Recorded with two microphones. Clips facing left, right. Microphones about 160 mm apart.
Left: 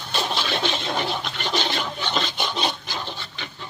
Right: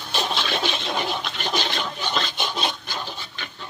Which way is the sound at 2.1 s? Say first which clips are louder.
Left 1 dB; centre (ahead or behind).